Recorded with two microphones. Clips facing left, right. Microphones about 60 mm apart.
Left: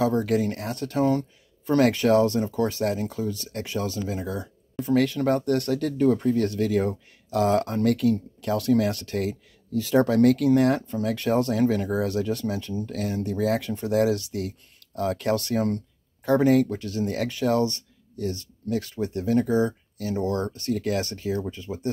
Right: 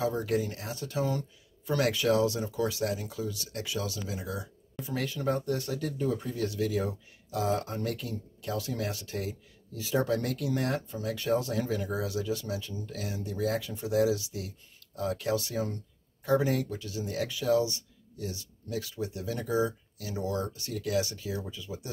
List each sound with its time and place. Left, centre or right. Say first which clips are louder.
0.0 s speech: left 7 dB; left